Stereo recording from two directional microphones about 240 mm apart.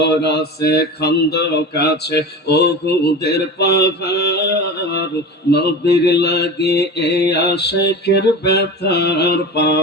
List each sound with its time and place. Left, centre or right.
0.0 s mantra: left